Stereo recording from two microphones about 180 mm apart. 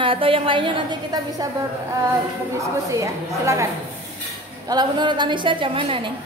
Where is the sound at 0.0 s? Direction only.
30° right (ahead or behind).